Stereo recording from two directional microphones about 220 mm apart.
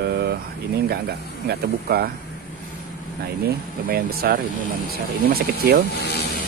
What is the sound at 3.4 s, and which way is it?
Speech, 45° right (ahead or behind).